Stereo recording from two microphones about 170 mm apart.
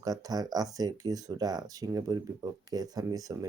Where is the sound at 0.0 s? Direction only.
20° right (ahead or behind).